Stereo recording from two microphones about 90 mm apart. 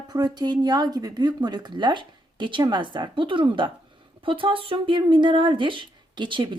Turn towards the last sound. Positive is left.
turn(degrees=-65)  # may be behind; listen again after turning